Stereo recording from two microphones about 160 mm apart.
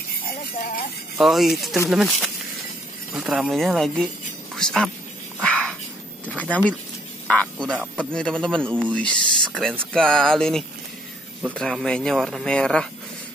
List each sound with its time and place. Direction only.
0.3 s jingle bell: 60° left (ahead or behind)
1.1 s speech: centre (ahead or behind)
5.4 s a sound: 5° left (ahead or behind)
7.7 s speech: 5° right (ahead or behind)
8.0 s speech: 5° left (ahead or behind)